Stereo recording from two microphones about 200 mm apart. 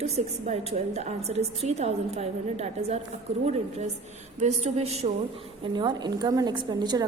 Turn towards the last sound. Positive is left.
turn(degrees=-20)  # may be behind; listen again after turning